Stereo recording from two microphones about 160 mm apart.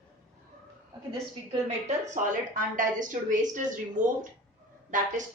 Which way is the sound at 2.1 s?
55° right (ahead or behind).